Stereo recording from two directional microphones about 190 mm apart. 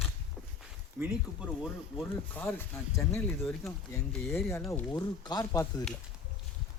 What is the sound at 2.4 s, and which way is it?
Speech, 10° left (ahead or behind).